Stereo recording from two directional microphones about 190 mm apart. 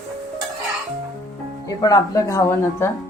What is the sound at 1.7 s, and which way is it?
A woman's voice, 20° left (ahead or behind).